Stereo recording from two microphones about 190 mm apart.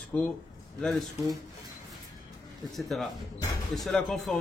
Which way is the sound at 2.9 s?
Centre (ahead or behind).